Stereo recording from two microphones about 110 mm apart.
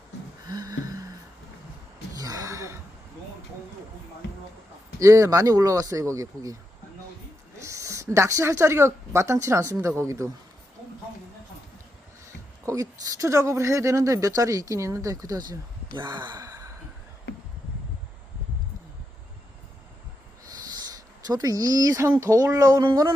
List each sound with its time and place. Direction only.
0.4 s a sound: 35° right (ahead or behind)
2.1 s gasp: 35° right (ahead or behind)
4.9 s speech: 30° right (ahead or behind)
7.6 s speech: 30° right (ahead or behind)
12.6 s speech: 30° right (ahead or behind)
16.0 s gasp: 40° right (ahead or behind)
20.7 s speech: 35° right (ahead or behind)